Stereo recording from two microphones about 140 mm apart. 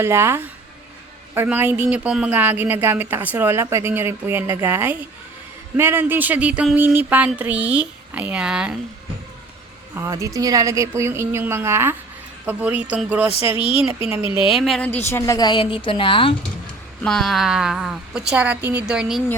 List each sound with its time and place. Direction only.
0.0 s speech: 15° right (ahead or behind)
9.9 s a woman's voice: 20° right (ahead or behind)
14.3 s a woman's voice: 40° left (ahead or behind)
14.5 s a woman's voice: centre (ahead or behind)
14.8 s a woman's voice: 15° left (ahead or behind)
15.4 s a woman's voice: 30° left (ahead or behind)
17.0 s a woman's voice: 5° left (ahead or behind)